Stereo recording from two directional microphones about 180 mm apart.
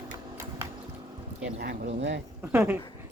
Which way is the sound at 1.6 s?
70° right (ahead or behind).